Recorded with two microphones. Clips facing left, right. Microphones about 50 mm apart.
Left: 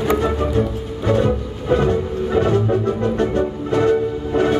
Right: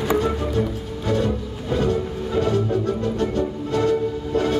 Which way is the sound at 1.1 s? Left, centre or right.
Left.